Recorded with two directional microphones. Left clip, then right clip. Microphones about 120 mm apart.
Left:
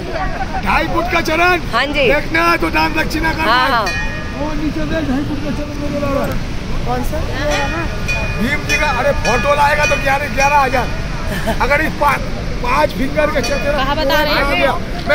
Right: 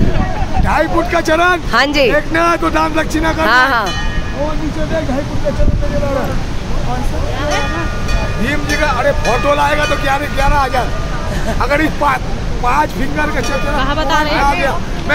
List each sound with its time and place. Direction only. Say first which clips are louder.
0.7 s speech: right 2 dB; centre (ahead or behind)
1.7 s speech: right 3 dB; 75° right (ahead or behind)
2.0 s speech: right 1 dB; 5° left (ahead or behind)
3.4 s speech: right 2 dB; 60° right (ahead or behind)
8.5 s speech: right 1 dB; centre (ahead or behind)
9.3 s speech: left 2 dB; 10° right (ahead or behind)
9.8 s speech: even; 20° right (ahead or behind)
13.3 s speech: left 1 dB; 20° right (ahead or behind)
14.4 s speech: right 1 dB; 45° right (ahead or behind)